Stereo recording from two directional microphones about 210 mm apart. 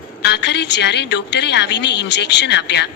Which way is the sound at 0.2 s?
55° left (ahead or behind).